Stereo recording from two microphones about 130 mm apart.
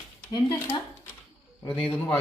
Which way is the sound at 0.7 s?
20° left (ahead or behind).